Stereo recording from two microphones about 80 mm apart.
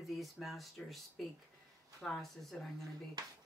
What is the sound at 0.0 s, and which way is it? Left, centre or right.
Speech, centre.